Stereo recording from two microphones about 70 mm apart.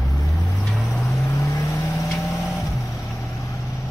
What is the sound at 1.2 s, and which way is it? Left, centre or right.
Vehicle, left.